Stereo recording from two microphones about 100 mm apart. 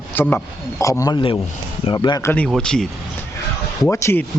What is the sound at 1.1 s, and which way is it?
Speech, 50° left (ahead or behind).